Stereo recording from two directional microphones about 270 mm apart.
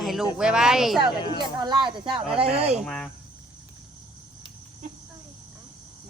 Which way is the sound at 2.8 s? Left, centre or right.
Centre.